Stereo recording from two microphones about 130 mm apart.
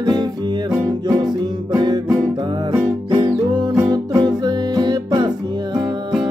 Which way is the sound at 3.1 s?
35° right (ahead or behind).